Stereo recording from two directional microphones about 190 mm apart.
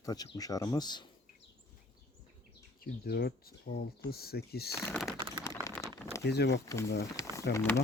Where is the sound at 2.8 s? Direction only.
55° left (ahead or behind).